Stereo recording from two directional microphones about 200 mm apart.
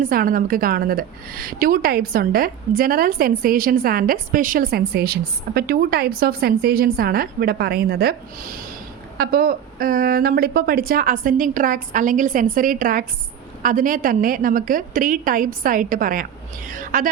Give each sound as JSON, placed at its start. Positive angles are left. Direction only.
{"t": 0.0, "sound": "a woman's voice", "side_deg": -45}